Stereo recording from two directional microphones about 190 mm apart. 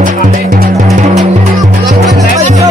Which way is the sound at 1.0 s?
40° right (ahead or behind).